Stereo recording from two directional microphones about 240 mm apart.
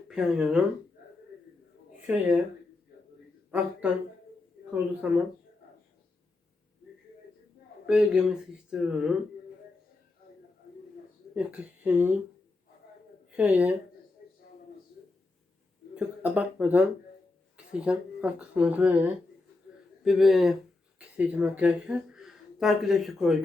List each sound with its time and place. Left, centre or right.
0.1 s speech: centre
2.0 s speech: centre
3.5 s speech: centre
7.9 s speech: centre
11.3 s speech: centre
13.3 s speech: centre
14.2 s a sound: left
16.0 s speech: centre